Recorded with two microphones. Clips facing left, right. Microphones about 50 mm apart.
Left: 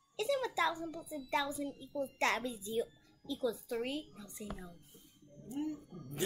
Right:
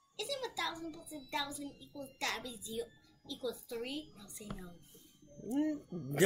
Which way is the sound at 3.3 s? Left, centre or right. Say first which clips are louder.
Left 4 dB; left.